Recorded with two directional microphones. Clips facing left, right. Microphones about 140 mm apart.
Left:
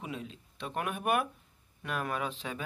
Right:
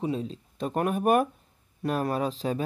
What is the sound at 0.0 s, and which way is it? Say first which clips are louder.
Speech: right 11 dB; 30° right (ahead or behind).